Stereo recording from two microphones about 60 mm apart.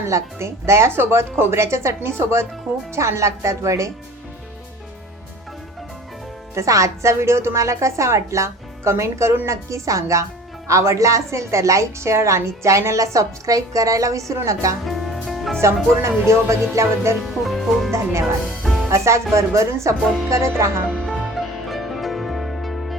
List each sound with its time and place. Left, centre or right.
0.1 s a woman's voice: right
6.5 s a woman's voice: right
14.8 s music: centre
15.6 s speech: right
17.4 s music: centre
17.9 s speech: right
18.6 s music: centre
18.9 s a woman's voice: right
20.9 s music: centre